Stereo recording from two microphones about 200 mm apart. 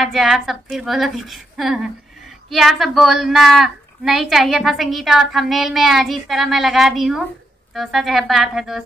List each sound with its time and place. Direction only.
0.0 s a woman's voice: centre (ahead or behind)